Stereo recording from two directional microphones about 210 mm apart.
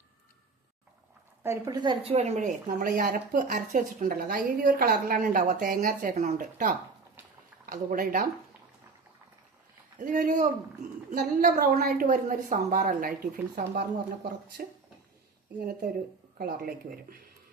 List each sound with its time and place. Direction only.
1.5 s a woman's voice: 15° right (ahead or behind); by 8.2 s 40° right (ahead or behind)
10.0 s a woman's voice: 40° right (ahead or behind)
16.4 s speech: 45° right (ahead or behind)